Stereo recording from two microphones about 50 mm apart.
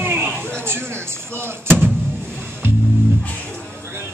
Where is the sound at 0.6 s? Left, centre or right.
Right.